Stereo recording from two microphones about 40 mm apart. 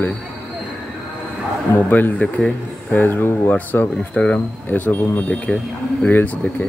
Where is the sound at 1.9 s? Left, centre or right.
Left.